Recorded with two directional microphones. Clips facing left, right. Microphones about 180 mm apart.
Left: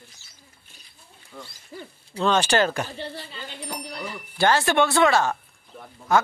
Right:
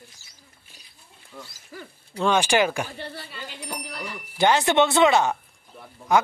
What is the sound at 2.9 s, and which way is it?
Speech, 25° left (ahead or behind).